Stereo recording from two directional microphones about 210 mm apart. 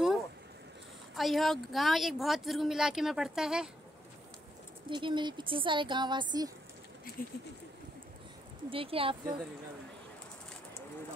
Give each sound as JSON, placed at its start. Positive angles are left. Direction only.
{"t": 1.1, "sound": "speech", "side_deg": 0}
{"t": 4.8, "sound": "speech", "side_deg": -25}
{"t": 7.2, "sound": "speech", "side_deg": 40}
{"t": 8.6, "sound": "speech", "side_deg": -25}